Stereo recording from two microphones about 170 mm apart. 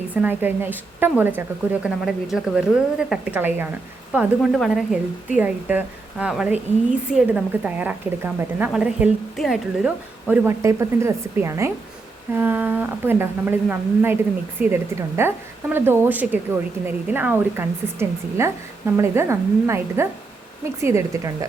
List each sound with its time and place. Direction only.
0.1 s a woman's voice: 10° right (ahead or behind)